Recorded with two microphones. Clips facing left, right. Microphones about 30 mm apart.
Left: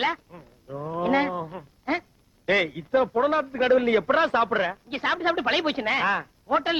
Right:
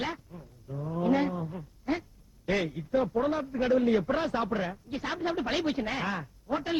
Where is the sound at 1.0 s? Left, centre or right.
Left.